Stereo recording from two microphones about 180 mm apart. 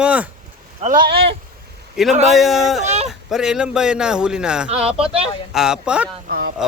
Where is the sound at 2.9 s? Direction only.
40° right (ahead or behind).